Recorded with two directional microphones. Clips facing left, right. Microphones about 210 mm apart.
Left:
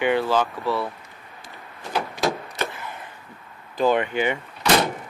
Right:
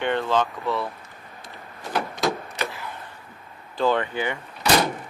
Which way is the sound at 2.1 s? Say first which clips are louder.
Left 1 dB; centre (ahead or behind).